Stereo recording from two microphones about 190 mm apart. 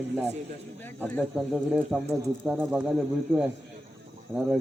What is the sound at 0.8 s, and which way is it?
Speech, 10° left (ahead or behind).